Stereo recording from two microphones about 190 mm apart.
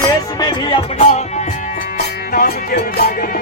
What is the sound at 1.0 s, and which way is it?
Music, 35° left (ahead or behind).